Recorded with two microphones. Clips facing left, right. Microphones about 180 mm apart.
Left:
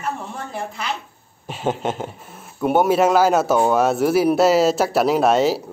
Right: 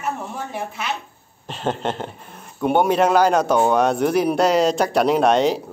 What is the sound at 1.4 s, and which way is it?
Speech, 10° left (ahead or behind).